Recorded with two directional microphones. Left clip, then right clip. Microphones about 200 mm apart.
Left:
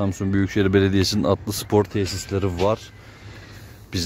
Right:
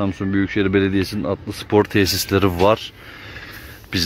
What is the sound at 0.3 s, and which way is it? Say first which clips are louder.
Speech: right 1 dB; 15° left (ahead or behind).